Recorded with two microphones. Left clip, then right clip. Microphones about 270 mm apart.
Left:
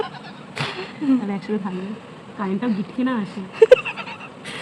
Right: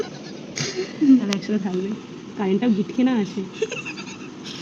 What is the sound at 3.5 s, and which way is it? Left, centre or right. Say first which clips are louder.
Goat: left 16 dB; left.